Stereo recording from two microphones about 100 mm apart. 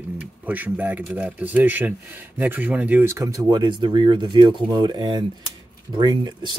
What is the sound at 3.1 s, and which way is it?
Speech, 35° right (ahead or behind).